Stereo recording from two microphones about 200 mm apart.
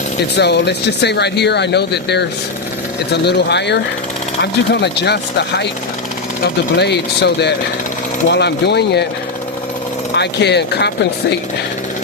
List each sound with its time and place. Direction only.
0.3 s speech: 55° left (ahead or behind)
6.7 s speech: 55° left (ahead or behind)
10.2 s speech: 55° left (ahead or behind)